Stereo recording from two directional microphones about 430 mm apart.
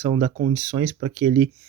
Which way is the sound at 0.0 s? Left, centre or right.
Centre.